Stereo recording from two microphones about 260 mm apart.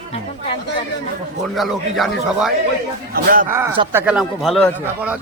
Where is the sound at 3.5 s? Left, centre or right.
Centre.